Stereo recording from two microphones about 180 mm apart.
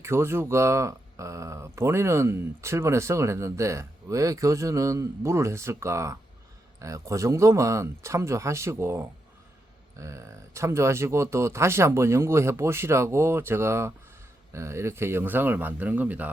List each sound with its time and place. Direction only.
0.0 s speech: 15° right (ahead or behind)